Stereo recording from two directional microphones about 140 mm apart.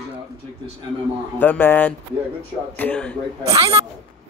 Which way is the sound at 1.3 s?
15° left (ahead or behind).